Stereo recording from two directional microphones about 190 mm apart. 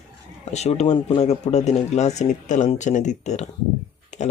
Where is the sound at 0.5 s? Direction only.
35° left (ahead or behind).